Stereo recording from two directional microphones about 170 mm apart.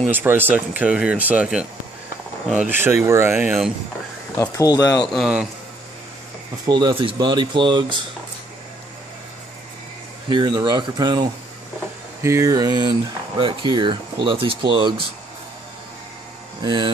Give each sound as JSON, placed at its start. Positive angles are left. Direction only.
{"t": 0.1, "sound": "speech", "side_deg": -10}
{"t": 4.4, "sound": "speech", "side_deg": 20}
{"t": 5.0, "sound": "a man's voice", "side_deg": 0}
{"t": 6.6, "sound": "speech", "side_deg": -25}
{"t": 10.3, "sound": "speech", "side_deg": -25}
{"t": 16.6, "sound": "speech", "side_deg": -30}